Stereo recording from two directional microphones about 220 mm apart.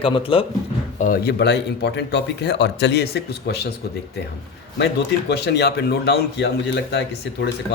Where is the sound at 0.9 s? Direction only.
40° left (ahead or behind).